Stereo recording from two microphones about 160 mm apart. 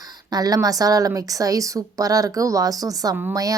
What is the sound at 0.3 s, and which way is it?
A woman's voice, 25° right (ahead or behind).